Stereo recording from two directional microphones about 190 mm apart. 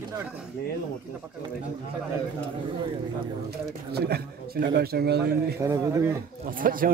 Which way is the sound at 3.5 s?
55° right (ahead or behind).